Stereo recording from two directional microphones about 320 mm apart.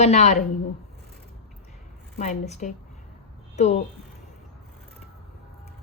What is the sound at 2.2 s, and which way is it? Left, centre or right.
Speech, left.